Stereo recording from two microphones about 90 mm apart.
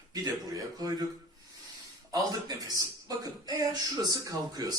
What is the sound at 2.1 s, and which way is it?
Speech, 45° right (ahead or behind).